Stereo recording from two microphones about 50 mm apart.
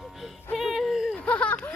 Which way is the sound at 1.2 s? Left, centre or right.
Left.